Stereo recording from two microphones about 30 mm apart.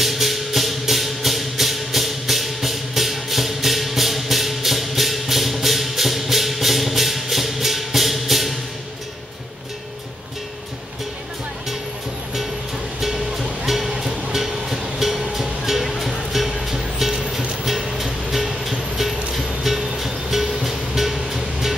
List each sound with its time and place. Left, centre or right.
0.0 s music: centre
13.0 s music: centre
15.8 s music: centre
17.1 s music: right
17.8 s music: centre